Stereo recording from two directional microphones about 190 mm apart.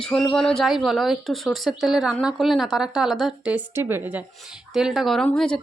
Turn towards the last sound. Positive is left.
turn(degrees=5)  # may be behind; listen again after turning